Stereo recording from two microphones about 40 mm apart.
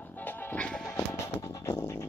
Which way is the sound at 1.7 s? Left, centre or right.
Left.